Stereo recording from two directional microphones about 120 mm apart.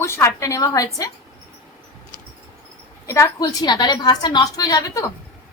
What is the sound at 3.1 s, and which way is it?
A woman's voice, 30° left (ahead or behind).